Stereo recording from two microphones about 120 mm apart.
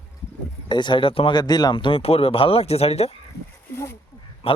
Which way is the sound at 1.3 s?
35° left (ahead or behind).